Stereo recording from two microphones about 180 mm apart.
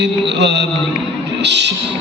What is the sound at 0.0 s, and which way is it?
A man's voice, 75° right (ahead or behind).